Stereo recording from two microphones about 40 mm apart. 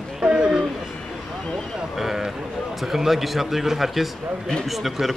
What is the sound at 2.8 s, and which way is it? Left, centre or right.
A man's voice, centre.